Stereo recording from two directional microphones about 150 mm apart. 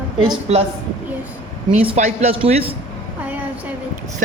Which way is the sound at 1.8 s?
50° right (ahead or behind).